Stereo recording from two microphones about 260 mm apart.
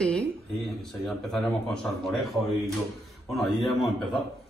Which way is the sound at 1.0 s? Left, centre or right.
Centre.